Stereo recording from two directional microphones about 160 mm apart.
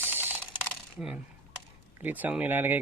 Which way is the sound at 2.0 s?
10° right (ahead or behind).